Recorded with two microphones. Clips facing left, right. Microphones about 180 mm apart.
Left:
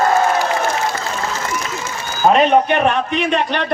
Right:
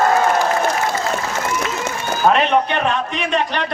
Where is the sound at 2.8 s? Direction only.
60° left (ahead or behind).